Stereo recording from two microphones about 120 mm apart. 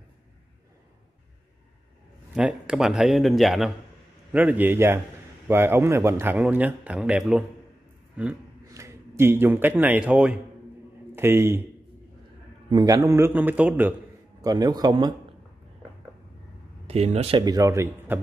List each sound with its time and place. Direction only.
2.3 s a man's voice: 5° right (ahead or behind)
4.3 s speech: 15° right (ahead or behind)
8.7 s a man's voice: 25° right (ahead or behind)
12.6 s a man's voice: 35° right (ahead or behind); by 13.9 s 15° right (ahead or behind)
14.4 s speech: 35° right (ahead or behind)
16.8 s speech: 65° right (ahead or behind)
17.4 s a man's voice: 30° right (ahead or behind)